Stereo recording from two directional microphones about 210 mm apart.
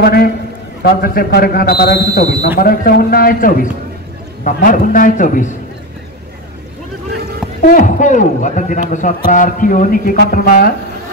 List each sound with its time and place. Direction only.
0.0 s a man's voice: 50° left (ahead or behind)
7.6 s a man's voice: 40° left (ahead or behind)